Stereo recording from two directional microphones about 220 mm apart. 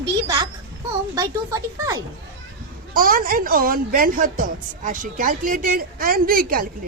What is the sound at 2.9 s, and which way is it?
A woman's voice, 40° right (ahead or behind).